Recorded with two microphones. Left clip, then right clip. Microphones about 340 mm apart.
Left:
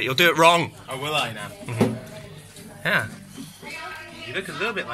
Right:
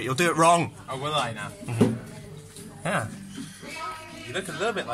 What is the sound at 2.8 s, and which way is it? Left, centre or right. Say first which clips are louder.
Speech: left 6 dB; centre.